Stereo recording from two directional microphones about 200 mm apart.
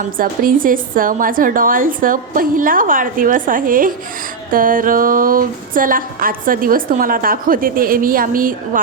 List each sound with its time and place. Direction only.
0.0 s speech: 45° right (ahead or behind)